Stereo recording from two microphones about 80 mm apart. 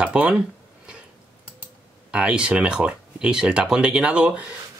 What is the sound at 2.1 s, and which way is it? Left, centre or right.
Speech, centre.